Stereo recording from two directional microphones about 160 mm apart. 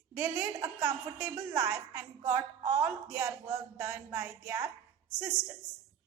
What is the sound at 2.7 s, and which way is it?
A woman's voice, 10° right (ahead or behind).